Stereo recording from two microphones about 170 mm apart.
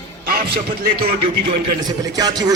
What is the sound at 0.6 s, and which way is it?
Speech, 60° right (ahead or behind).